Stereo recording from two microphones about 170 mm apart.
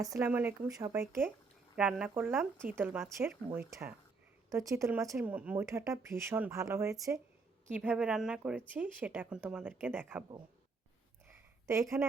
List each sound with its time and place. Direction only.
0.0 s a woman's voice: 20° right (ahead or behind)
7.7 s speech: 5° right (ahead or behind)
11.3 s a sound: 15° right (ahead or behind)